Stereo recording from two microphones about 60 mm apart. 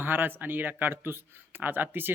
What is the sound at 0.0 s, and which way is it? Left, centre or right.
Speech, right.